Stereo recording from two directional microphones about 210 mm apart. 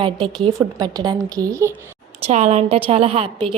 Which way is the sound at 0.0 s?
25° right (ahead or behind).